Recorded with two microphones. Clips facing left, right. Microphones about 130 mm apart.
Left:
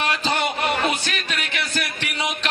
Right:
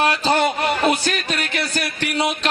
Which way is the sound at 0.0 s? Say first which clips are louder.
Right 5 dB; 40° right (ahead or behind).